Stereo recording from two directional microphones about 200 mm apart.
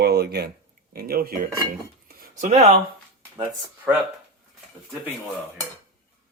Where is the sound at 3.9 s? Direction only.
10° right (ahead or behind).